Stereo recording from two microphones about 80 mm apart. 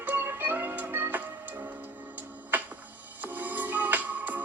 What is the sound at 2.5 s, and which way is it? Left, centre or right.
Music, right.